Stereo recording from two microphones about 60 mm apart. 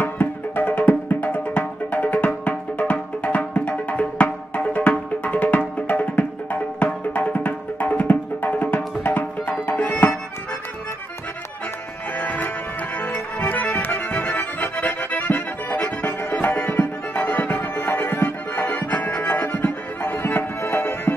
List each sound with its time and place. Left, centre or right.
0.0 s music: left
12.2 s music: left
13.0 s accordion: left
19.1 s music: left